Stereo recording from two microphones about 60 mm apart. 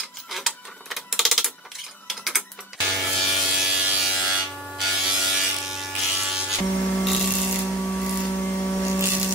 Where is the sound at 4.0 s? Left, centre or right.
Centre.